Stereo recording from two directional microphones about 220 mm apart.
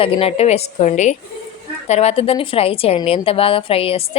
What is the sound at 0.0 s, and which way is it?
A woman's voice, 25° left (ahead or behind).